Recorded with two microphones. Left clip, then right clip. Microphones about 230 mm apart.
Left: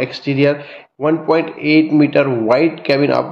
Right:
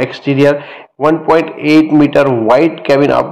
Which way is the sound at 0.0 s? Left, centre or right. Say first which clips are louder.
Right 5 dB; centre.